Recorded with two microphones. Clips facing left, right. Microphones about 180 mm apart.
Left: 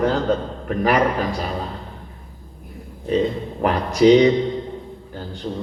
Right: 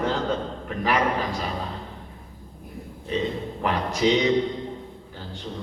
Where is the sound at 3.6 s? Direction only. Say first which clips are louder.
Left 8 dB; 45° left (ahead or behind).